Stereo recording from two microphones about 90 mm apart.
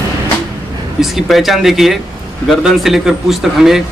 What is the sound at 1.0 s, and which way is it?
A man's voice, centre (ahead or behind).